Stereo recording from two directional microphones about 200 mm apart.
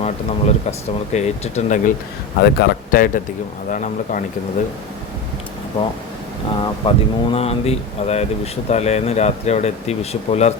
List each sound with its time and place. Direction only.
0.0 s speech: 30° left (ahead or behind)
2.4 s speech: 55° left (ahead or behind)
6.6 s speech: 25° left (ahead or behind)